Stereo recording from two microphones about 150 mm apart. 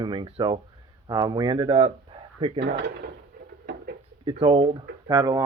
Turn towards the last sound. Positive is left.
turn(degrees=-25)  # may be behind; listen again after turning